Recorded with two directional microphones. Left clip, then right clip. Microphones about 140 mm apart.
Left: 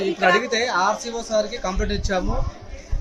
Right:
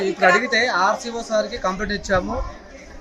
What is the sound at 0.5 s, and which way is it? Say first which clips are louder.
Speech: right 2 dB; 30° left (ahead or behind).